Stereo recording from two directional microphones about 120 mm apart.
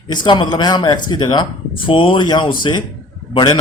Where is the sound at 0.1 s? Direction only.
40° left (ahead or behind).